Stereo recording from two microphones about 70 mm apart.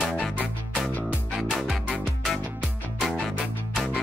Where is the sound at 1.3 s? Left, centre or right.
Centre.